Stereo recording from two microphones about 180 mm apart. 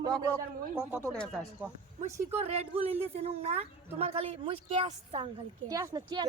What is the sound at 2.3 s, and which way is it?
A woman's voice, 35° right (ahead or behind).